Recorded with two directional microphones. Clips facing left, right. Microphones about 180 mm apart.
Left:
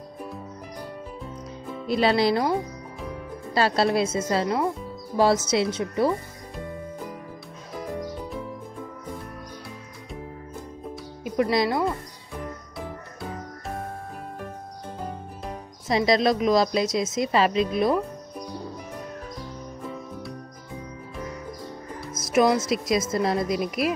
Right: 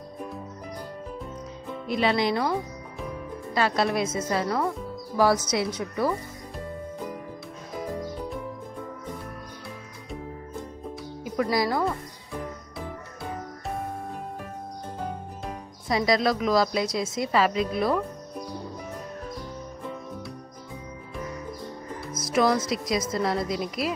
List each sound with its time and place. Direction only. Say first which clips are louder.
1.9 s speech: left 3 dB; 35° left (ahead or behind)
3.5 s speech: left 3 dB; 30° left (ahead or behind)
11.5 s speech: left 1 dB; 25° left (ahead or behind)
15.9 s speech: left 2 dB; 25° left (ahead or behind)
22.1 s music: left 3 dB; 25° left (ahead or behind)
22.6 s speech: left 3 dB; 25° left (ahead or behind)